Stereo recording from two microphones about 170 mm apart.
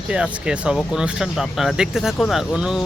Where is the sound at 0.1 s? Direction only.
5° right (ahead or behind).